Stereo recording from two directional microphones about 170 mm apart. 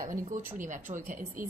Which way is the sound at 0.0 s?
50° right (ahead or behind).